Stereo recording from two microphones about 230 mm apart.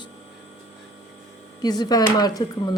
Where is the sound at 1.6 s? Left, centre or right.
Centre.